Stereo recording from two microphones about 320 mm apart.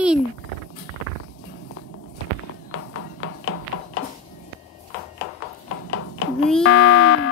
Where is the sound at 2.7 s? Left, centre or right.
Left.